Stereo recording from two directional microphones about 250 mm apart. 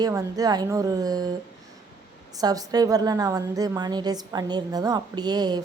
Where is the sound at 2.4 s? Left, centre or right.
Centre.